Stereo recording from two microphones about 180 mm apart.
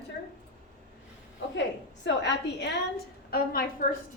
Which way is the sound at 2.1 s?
75° left (ahead or behind).